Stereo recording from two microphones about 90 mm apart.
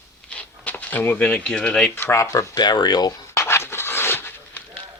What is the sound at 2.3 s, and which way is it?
Speech, 55° left (ahead or behind).